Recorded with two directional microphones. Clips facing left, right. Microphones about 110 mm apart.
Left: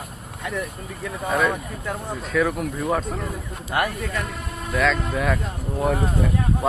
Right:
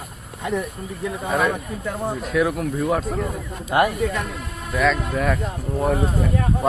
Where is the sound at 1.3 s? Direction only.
5° right (ahead or behind).